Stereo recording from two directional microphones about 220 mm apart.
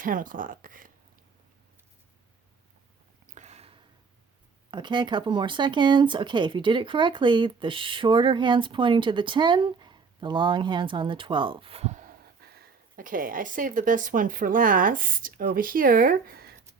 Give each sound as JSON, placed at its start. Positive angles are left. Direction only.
{"t": 0.0, "sound": "speech", "side_deg": -40}
{"t": 3.3, "sound": "a sound", "side_deg": -30}
{"t": 4.7, "sound": "speech", "side_deg": -20}